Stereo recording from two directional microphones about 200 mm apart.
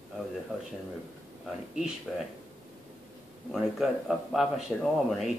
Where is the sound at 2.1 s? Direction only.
Centre (ahead or behind).